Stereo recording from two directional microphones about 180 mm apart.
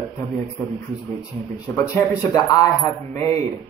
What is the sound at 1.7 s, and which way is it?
A man's voice, 10° left (ahead or behind).